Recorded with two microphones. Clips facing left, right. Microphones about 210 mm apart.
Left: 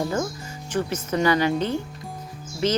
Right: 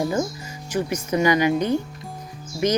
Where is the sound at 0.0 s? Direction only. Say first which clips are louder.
Right 2 dB; 15° right (ahead or behind).